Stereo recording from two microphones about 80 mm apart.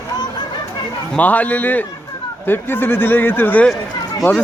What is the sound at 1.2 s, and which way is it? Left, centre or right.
Speech, left.